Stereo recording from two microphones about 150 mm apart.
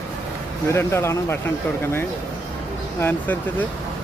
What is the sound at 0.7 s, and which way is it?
Speech, 15° left (ahead or behind).